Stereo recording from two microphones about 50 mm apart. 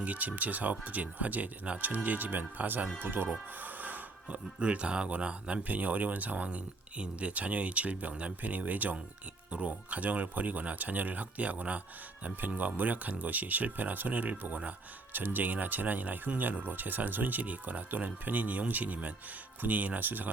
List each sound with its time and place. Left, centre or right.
0.0 s speech: right